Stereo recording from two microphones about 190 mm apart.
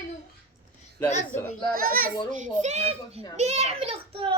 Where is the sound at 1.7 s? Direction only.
50° right (ahead or behind).